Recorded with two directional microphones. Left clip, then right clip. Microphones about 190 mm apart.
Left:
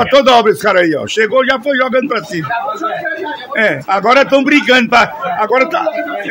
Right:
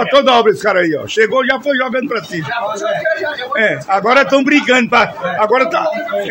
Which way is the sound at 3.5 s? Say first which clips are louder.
Left 1 dB; 15° left (ahead or behind).